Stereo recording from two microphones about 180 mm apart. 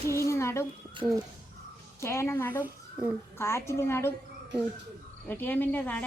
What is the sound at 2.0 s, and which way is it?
Speech, 15° left (ahead or behind).